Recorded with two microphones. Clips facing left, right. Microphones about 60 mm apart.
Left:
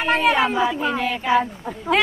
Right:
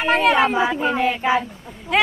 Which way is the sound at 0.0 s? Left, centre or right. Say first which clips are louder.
Right 2 dB; centre.